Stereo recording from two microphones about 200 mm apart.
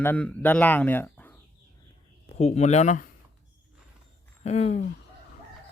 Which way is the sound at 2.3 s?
35° left (ahead or behind).